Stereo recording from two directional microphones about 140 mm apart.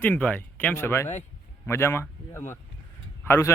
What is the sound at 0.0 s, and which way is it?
Speech, 10° left (ahead or behind).